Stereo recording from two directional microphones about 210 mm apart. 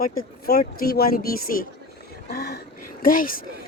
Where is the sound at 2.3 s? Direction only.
50° left (ahead or behind).